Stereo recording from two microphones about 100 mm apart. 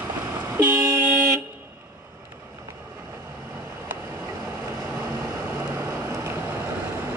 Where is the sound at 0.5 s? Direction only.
20° right (ahead or behind).